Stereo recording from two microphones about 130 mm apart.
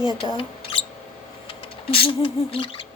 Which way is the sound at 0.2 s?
45° left (ahead or behind).